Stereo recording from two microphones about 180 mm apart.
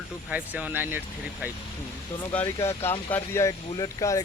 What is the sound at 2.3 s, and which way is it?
Speech, 10° left (ahead or behind).